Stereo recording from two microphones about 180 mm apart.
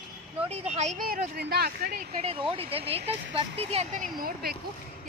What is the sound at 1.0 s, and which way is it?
Speech, 55° right (ahead or behind).